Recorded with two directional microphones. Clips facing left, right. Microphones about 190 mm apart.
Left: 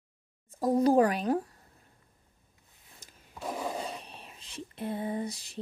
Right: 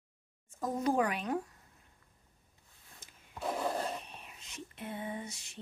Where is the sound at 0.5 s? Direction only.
35° left (ahead or behind).